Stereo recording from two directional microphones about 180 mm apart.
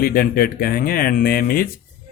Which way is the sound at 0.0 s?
55° left (ahead or behind).